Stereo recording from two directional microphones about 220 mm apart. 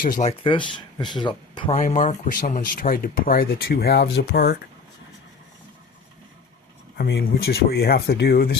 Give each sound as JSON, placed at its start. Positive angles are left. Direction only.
{"t": 0.0, "sound": "speech", "side_deg": 35}
{"t": 1.7, "sound": "speech", "side_deg": 35}
{"t": 6.9, "sound": "speech", "side_deg": 45}